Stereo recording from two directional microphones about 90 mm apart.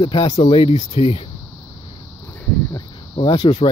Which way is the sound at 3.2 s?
55° left (ahead or behind).